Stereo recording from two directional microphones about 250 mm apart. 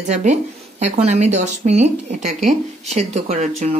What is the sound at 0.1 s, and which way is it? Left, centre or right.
Speech, right.